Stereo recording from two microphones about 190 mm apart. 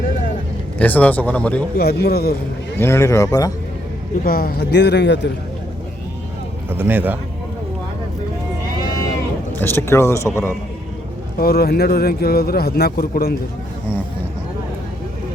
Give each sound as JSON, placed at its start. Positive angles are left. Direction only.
{"t": 0.8, "sound": "speech", "side_deg": 10}
{"t": 1.8, "sound": "a man's voice", "side_deg": 55}
{"t": 2.7, "sound": "speech", "side_deg": 15}
{"t": 4.2, "sound": "a man's voice", "side_deg": 50}
{"t": 6.7, "sound": "speech", "side_deg": -10}
{"t": 9.6, "sound": "speech", "side_deg": 10}
{"t": 11.3, "sound": "a man's voice", "side_deg": 55}